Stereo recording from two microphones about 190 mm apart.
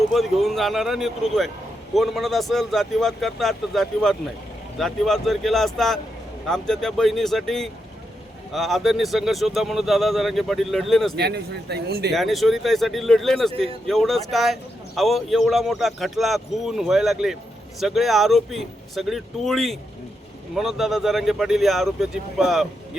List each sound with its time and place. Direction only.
0.1 s a man's voice: centre (ahead or behind)
11.2 s speech: 60° right (ahead or behind)
12.1 s a man's voice: centre (ahead or behind)